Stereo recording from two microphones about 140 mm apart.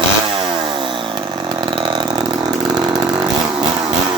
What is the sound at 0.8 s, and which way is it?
Chainsaw, 35° right (ahead or behind).